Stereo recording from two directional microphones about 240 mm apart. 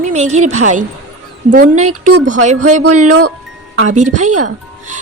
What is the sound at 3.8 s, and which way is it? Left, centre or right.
Speech, right.